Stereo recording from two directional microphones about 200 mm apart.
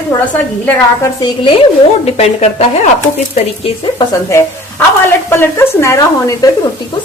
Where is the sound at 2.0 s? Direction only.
30° left (ahead or behind).